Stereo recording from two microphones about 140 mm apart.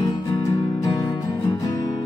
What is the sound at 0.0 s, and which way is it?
Music, 30° left (ahead or behind).